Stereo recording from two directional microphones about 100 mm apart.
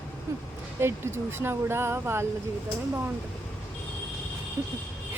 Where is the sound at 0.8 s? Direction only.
25° right (ahead or behind).